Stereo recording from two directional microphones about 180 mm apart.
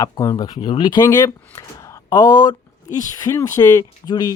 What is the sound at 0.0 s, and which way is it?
Speech, 20° left (ahead or behind).